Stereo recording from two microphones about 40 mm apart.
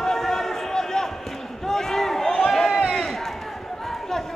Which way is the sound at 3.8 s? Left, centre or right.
Centre.